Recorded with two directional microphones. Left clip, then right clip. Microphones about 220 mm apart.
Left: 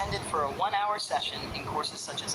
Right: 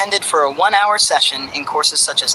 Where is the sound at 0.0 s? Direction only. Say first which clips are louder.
Right 15 dB; 40° right (ahead or behind).